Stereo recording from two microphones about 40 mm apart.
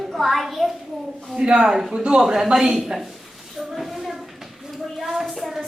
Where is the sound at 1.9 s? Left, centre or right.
Right.